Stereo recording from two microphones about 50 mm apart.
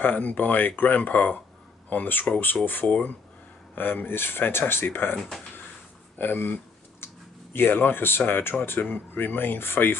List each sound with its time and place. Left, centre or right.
0.0 s speech: left
6.1 s computer keyboard: left
7.5 s speech: left